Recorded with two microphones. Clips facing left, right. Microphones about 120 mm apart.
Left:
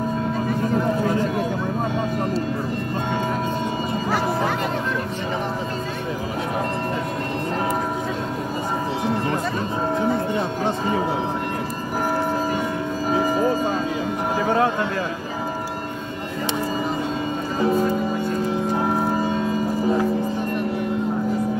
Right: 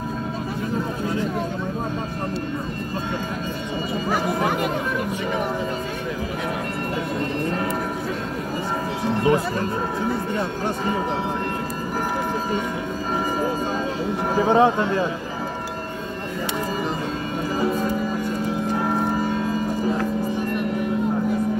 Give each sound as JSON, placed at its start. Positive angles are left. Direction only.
{"t": 14.4, "sound": "speech", "side_deg": -20}